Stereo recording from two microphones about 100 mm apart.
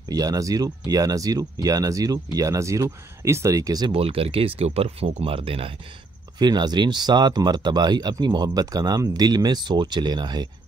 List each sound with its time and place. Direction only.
0.1 s speech: 35° right (ahead or behind)
3.9 s speech: 70° right (ahead or behind)
6.3 s speech: 45° right (ahead or behind)